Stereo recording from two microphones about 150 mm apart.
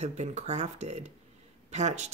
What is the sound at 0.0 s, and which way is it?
Speech, 50° right (ahead or behind).